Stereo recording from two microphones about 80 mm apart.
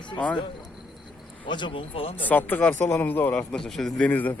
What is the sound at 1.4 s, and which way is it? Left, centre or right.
Speech, left.